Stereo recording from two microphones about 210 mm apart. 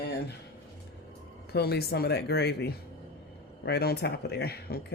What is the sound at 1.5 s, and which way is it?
Speech, 50° left (ahead or behind).